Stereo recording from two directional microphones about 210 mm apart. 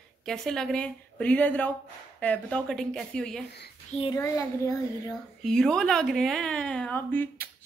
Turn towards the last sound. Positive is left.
turn(degrees=10)  # may be behind; listen again after turning